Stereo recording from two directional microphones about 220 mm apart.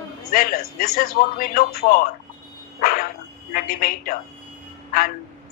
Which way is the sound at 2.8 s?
40° left (ahead or behind).